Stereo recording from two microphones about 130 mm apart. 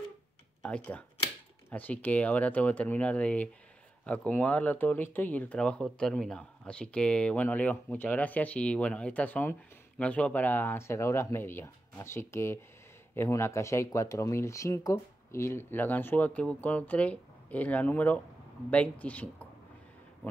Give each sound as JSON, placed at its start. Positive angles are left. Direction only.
{"t": 0.6, "sound": "speech", "side_deg": 10}